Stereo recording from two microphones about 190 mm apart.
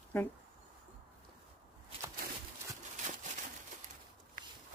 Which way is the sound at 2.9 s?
40° right (ahead or behind).